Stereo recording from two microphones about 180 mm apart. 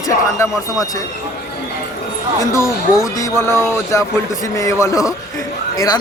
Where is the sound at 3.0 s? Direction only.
20° left (ahead or behind).